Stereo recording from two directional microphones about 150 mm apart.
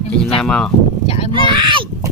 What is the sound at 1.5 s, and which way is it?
Speech, 35° right (ahead or behind).